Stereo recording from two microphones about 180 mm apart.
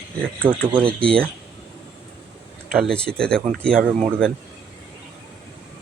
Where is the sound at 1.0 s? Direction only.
5° left (ahead or behind).